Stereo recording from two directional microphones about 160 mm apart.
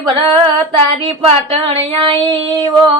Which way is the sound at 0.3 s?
35° right (ahead or behind).